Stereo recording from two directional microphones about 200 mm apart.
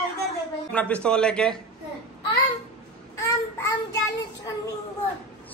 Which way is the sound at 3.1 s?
15° left (ahead or behind).